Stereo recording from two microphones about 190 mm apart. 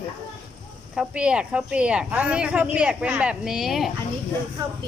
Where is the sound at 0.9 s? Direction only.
5° right (ahead or behind).